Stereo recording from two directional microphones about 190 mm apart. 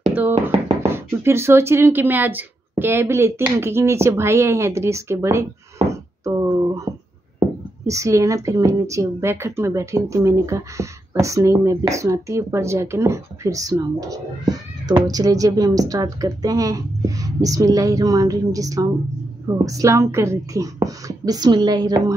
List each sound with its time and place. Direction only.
0.0 s chopping: 10° right (ahead or behind)
0.9 s speech: 15° right (ahead or behind)
5.9 s a sound: 15° right (ahead or behind)
7.3 s speech: 15° right (ahead or behind)